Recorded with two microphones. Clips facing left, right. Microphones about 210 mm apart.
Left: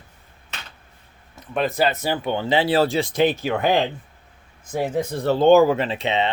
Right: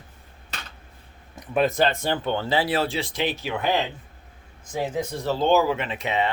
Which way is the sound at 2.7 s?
40° left (ahead or behind).